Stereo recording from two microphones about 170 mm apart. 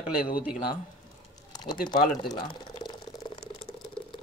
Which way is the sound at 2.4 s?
25° left (ahead or behind).